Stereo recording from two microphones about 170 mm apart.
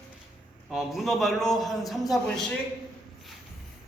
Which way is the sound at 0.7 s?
Centre (ahead or behind).